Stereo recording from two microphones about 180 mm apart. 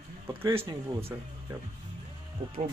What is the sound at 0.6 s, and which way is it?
Speech, 30° right (ahead or behind).